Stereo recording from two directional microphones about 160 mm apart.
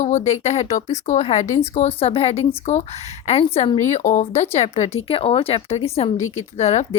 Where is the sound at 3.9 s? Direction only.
50° left (ahead or behind).